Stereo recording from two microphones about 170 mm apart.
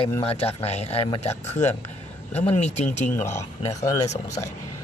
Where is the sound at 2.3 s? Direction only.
40° left (ahead or behind).